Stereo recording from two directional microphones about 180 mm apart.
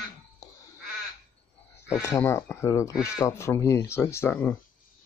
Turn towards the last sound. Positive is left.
turn(degrees=10)  # may be behind; listen again after turning